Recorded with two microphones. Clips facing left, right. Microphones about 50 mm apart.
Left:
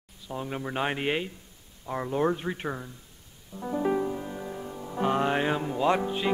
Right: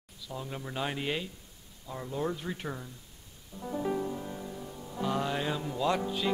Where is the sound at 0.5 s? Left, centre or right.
Left.